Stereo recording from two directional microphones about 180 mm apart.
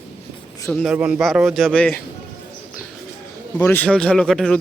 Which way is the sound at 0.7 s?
5° right (ahead or behind).